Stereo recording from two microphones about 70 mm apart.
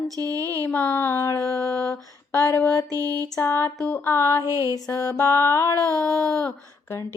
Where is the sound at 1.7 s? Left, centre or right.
Centre.